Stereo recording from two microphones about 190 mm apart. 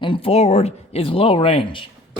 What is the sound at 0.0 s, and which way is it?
Speech, 30° left (ahead or behind).